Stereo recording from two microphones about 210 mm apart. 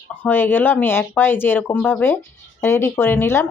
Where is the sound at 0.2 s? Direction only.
10° left (ahead or behind).